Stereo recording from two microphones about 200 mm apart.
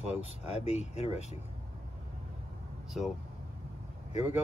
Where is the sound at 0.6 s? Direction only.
35° left (ahead or behind).